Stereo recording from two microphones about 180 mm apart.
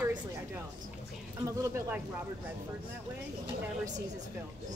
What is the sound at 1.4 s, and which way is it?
Speech, 15° right (ahead or behind).